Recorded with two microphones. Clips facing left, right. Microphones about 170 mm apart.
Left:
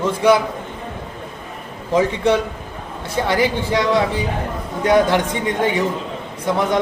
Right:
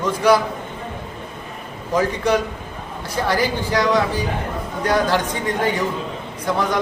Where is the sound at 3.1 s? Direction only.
25° left (ahead or behind).